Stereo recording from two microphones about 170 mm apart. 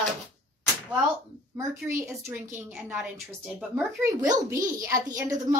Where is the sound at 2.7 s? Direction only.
5° right (ahead or behind).